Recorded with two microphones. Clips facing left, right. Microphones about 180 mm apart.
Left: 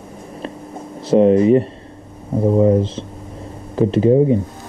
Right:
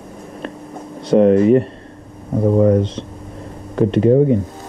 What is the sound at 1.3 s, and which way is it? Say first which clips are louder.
Speech: right 1 dB; centre (ahead or behind).